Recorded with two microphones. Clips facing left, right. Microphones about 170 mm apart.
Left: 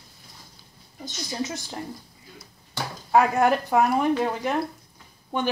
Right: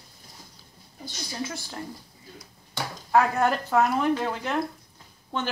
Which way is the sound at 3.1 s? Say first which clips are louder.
Left 3 dB; 15° left (ahead or behind).